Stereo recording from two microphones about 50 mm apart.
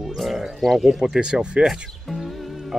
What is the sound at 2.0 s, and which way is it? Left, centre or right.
Music, centre.